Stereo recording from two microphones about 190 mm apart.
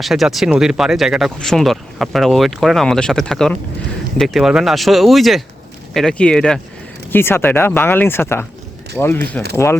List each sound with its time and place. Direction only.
0.0 s speech: centre (ahead or behind)